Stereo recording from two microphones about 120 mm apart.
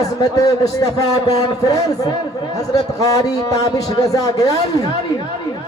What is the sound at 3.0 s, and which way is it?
A man's voice, 30° left (ahead or behind).